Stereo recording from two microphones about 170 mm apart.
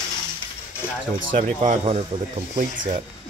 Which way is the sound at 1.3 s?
50° right (ahead or behind).